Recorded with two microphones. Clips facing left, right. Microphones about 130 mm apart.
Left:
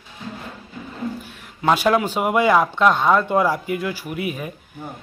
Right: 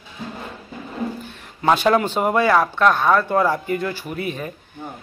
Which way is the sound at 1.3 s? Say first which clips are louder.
Right 1 dB; 5° left (ahead or behind).